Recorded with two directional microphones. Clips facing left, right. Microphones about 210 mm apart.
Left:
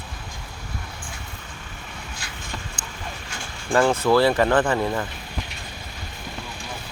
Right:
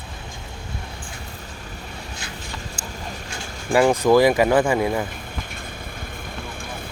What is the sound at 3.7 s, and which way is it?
Speech, 15° right (ahead or behind).